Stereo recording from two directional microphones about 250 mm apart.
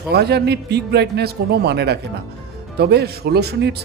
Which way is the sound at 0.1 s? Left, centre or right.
Right.